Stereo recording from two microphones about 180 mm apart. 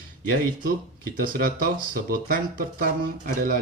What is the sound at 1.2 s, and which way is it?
Speech, 50° right (ahead or behind).